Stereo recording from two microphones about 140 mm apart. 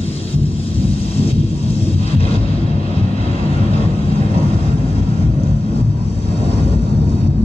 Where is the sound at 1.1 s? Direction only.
45° left (ahead or behind).